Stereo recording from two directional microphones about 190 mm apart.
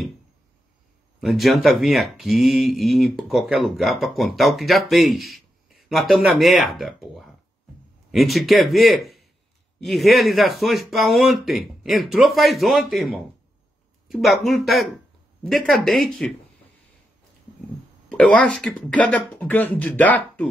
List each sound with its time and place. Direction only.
1.2 s speech: centre (ahead or behind)
18.1 s speech: 5° left (ahead or behind)